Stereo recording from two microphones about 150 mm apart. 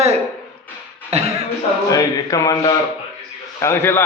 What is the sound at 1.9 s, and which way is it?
A man's voice, 25° left (ahead or behind).